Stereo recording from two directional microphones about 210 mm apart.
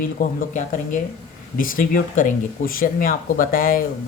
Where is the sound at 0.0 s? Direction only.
40° left (ahead or behind).